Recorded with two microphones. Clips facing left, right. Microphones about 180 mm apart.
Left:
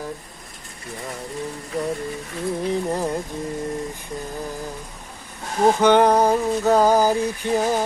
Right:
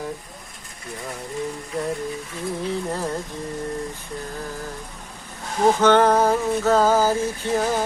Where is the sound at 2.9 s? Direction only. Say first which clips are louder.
Left 3 dB; 15° left (ahead or behind).